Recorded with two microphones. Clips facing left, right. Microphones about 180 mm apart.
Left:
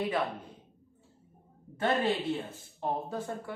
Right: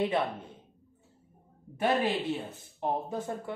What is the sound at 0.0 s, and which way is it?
Speech, 25° right (ahead or behind).